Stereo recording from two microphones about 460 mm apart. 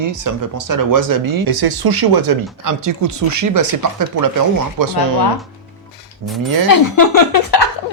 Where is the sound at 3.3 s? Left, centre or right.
Right.